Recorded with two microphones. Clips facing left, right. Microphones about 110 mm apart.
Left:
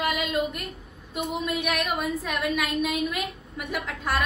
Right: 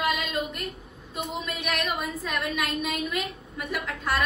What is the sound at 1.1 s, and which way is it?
A woman's voice, centre (ahead or behind).